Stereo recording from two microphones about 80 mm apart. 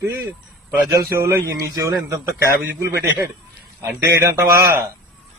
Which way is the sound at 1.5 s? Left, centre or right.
Right.